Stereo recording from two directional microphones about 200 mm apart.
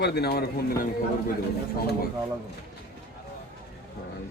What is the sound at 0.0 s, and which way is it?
Speech, 55° left (ahead or behind).